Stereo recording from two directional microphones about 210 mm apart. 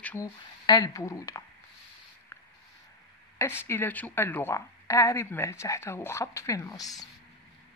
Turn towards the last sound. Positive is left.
turn(degrees=15)  # may be behind; listen again after turning